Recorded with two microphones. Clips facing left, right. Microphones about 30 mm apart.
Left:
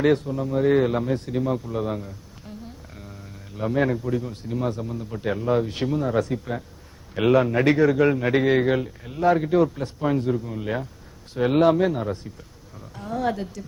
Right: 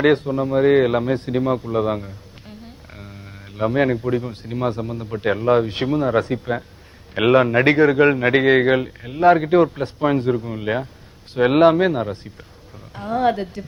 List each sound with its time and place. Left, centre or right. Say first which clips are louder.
0.0 s a man's voice: right 4 dB; right